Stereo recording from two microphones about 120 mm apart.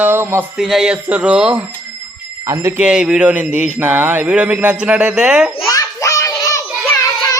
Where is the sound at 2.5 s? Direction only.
25° right (ahead or behind).